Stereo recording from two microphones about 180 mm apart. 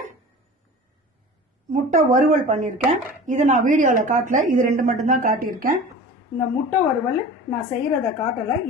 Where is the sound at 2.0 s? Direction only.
45° right (ahead or behind).